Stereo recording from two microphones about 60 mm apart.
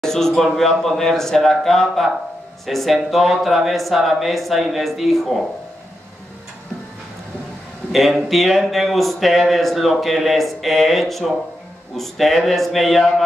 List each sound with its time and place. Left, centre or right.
0.0 s speech: centre
7.9 s speech: centre